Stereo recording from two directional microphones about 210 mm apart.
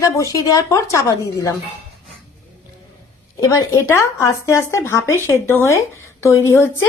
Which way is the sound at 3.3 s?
15° left (ahead or behind).